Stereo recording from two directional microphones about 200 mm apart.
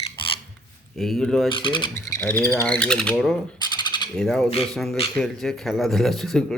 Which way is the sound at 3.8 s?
20° left (ahead or behind).